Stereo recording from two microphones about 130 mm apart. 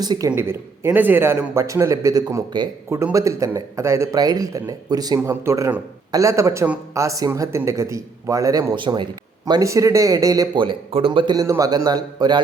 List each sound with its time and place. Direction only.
0.0 s speech: 30° right (ahead or behind)
0.3 s a man's voice: 20° right (ahead or behind)
8.7 s speech: 40° right (ahead or behind)
9.5 s speech: 25° right (ahead or behind)
10.6 s speech: 40° right (ahead or behind)
11.3 s speech: 25° right (ahead or behind)